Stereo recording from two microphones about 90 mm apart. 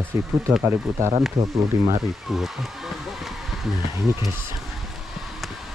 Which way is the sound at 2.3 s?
Centre (ahead or behind).